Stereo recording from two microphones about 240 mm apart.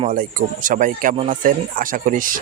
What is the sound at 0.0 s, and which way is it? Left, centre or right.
Speech, right.